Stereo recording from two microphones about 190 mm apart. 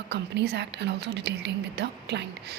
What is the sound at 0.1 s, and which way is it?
Speech, 65° right (ahead or behind).